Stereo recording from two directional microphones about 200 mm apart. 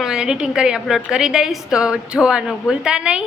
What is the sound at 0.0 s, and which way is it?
A woman's voice, 5° right (ahead or behind).